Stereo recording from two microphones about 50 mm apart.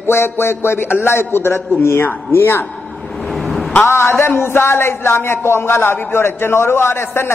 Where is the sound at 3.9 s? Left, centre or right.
Left.